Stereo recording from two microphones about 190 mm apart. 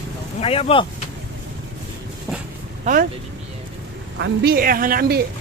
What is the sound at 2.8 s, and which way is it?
Speech, 45° right (ahead or behind).